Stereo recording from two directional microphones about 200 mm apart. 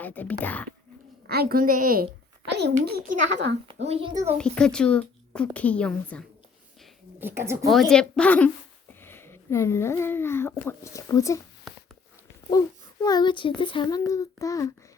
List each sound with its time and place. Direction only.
0.0 s speech: 10° left (ahead or behind)
1.3 s a woman's voice: 50° right (ahead or behind)
2.6 s a child's voice: 55° right (ahead or behind)
3.7 s a woman's voice: 30° right (ahead or behind)
4.4 s speech: 5° left (ahead or behind)
7.2 s speech: 10° right (ahead or behind)
7.7 s speech: centre (ahead or behind)
12.5 s a child's voice: 20° left (ahead or behind)